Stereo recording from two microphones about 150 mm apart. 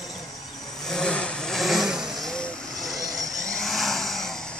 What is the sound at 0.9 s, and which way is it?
Vehicle, 5° left (ahead or behind).